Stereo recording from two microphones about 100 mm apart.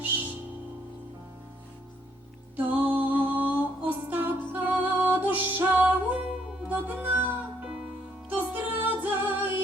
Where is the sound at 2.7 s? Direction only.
15° right (ahead or behind).